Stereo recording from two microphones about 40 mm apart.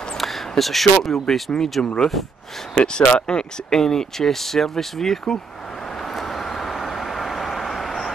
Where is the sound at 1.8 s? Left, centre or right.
Centre.